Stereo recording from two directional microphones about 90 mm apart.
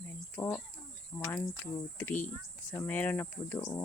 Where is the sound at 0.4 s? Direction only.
20° left (ahead or behind).